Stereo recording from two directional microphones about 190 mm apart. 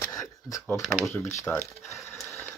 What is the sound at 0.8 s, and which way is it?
Speech, centre (ahead or behind).